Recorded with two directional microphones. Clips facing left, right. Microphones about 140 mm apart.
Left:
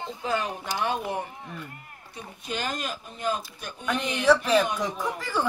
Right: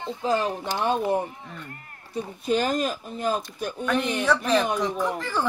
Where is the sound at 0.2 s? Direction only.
35° right (ahead or behind).